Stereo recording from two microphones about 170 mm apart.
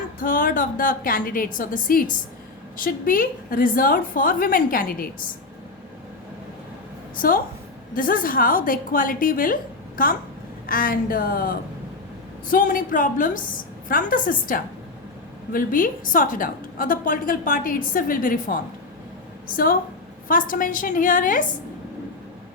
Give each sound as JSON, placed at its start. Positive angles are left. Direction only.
{"t": 0.2, "sound": "a woman's voice", "side_deg": 55}
{"t": 7.2, "sound": "a woman's voice", "side_deg": 55}